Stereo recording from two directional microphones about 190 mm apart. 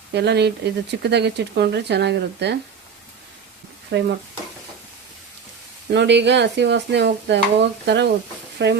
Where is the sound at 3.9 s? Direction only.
65° right (ahead or behind).